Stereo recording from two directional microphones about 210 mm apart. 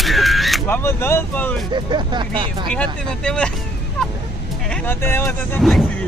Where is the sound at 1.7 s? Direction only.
20° right (ahead or behind).